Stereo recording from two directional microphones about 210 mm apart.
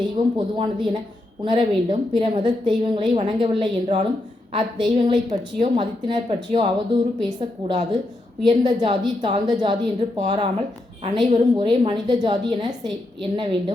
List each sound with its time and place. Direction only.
0.3 s a woman's voice: 25° right (ahead or behind)